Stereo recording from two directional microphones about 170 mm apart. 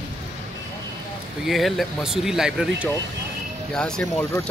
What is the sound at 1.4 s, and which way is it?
Speech, centre (ahead or behind).